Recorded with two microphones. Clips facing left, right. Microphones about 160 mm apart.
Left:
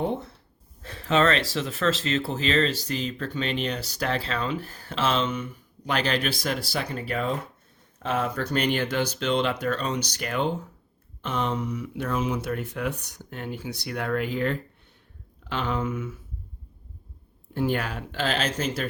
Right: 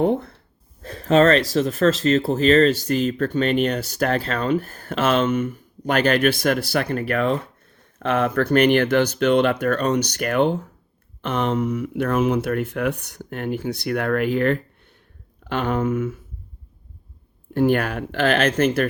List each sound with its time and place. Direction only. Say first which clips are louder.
0.0 s speech: right 8 dB; 55° right (ahead or behind)
0.8 s speech: right 7 dB; 40° right (ahead or behind)
17.5 s speech: right 7 dB; 60° right (ahead or behind)